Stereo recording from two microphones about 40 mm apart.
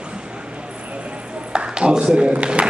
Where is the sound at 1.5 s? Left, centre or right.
Right.